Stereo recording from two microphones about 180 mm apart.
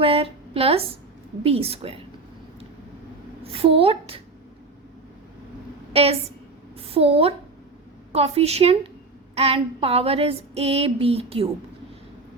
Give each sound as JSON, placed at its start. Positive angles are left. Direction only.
{"t": 0.0, "sound": "a sound", "side_deg": -30}
{"t": 1.5, "sound": "female singing", "side_deg": -35}
{"t": 3.4, "sound": "female singing", "side_deg": -30}
{"t": 5.9, "sound": "a woman's voice", "side_deg": -35}
{"t": 8.1, "sound": "female singing", "side_deg": -35}